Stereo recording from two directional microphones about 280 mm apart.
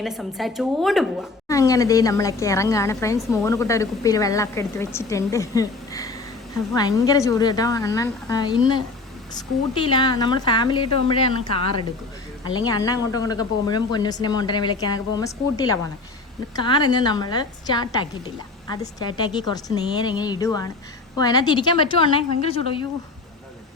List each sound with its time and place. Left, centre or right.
0.0 s a woman's voice: centre
1.5 s speech: centre
12.5 s speech: centre